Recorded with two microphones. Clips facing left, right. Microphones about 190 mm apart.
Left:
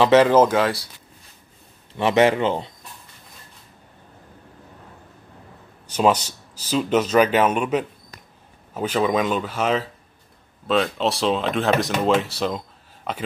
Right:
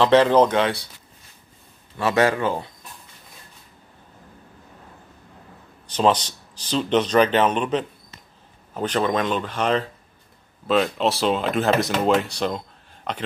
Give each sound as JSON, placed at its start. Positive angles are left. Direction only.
{"t": 0.0, "sound": "speech", "side_deg": 5}
{"t": 2.0, "sound": "speech", "side_deg": 20}
{"t": 5.9, "sound": "speech", "side_deg": 10}